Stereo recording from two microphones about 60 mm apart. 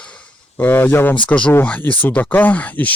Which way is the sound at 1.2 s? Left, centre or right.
Left.